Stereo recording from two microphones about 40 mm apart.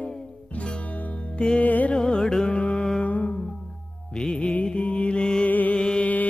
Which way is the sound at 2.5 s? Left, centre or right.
Left.